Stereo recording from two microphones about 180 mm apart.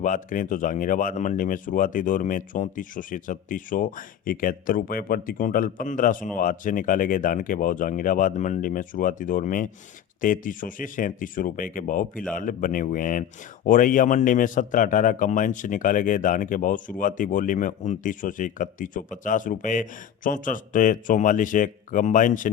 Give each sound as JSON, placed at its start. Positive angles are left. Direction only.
{"t": 0.0, "sound": "speech", "side_deg": 45}